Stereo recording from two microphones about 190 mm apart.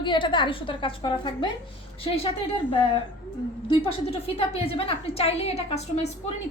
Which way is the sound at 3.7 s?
30° left (ahead or behind).